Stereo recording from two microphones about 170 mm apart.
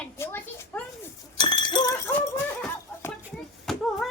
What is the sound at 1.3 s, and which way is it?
Chink, 25° left (ahead or behind).